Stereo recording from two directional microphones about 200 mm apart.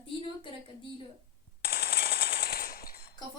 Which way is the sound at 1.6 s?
50° left (ahead or behind).